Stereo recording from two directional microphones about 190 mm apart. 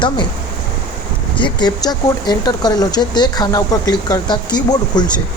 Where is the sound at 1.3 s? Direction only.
25° left (ahead or behind).